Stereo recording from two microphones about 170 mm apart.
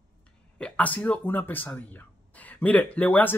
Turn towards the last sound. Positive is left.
turn(degrees=10)  # may be behind; listen again after turning